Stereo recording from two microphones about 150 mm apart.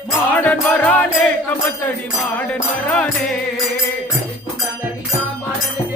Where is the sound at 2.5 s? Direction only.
10° left (ahead or behind).